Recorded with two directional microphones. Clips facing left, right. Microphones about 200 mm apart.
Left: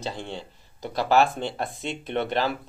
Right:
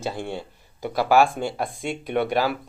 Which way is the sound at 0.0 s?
15° right (ahead or behind).